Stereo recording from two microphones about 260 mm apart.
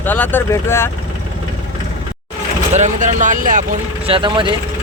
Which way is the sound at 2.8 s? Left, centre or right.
Right.